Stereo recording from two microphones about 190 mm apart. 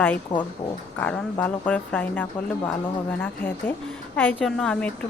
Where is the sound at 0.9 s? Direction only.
10° left (ahead or behind).